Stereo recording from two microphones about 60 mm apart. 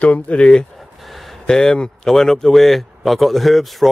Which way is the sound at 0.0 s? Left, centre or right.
Left.